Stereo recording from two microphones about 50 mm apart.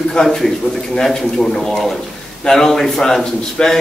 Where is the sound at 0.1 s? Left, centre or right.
Centre.